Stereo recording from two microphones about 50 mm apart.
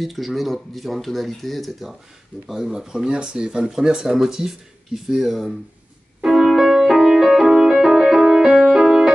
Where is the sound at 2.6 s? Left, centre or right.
Centre.